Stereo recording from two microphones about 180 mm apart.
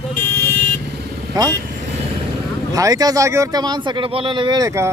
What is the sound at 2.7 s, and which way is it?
Speech, 20° right (ahead or behind).